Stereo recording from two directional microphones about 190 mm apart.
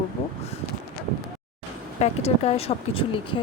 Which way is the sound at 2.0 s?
30° left (ahead or behind).